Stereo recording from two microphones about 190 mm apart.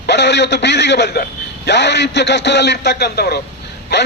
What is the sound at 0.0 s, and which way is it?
A man's voice, 65° left (ahead or behind).